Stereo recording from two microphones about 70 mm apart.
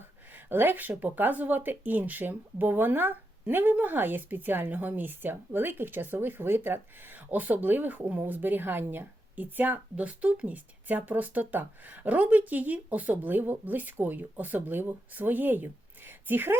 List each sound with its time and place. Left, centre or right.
0.3 s speech: right